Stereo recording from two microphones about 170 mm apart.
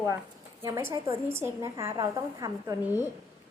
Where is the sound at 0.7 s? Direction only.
20° right (ahead or behind).